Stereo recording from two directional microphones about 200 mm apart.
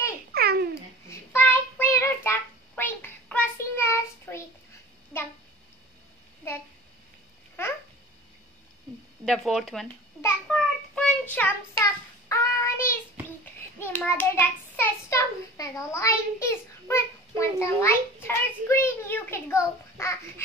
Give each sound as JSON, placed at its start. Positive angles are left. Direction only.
{"t": 0.3, "sound": "babbling", "side_deg": -50}
{"t": 1.0, "sound": "child singing", "side_deg": 15}
{"t": 5.1, "sound": "a sound", "side_deg": 10}
{"t": 6.4, "sound": "a sound", "side_deg": 15}
{"t": 7.6, "sound": "babbling", "side_deg": 10}
{"t": 9.2, "sound": "speech", "side_deg": 0}
{"t": 10.2, "sound": "a sound", "side_deg": 0}
{"t": 10.5, "sound": "child singing", "side_deg": 5}
{"t": 13.7, "sound": "hands", "side_deg": 10}